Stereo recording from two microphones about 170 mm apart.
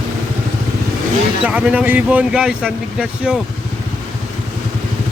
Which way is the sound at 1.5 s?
5° right (ahead or behind).